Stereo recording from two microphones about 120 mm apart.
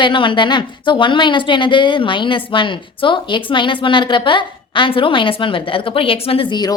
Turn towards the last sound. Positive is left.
turn(degrees=40)  # may be behind; listen again after turning